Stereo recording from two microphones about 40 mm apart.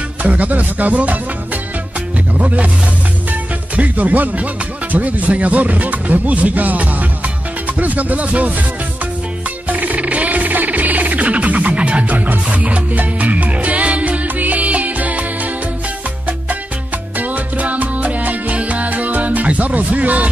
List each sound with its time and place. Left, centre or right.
0.2 s speech: right
2.3 s speech: right
3.7 s speech: right
9.7 s music: right
17.2 s music: right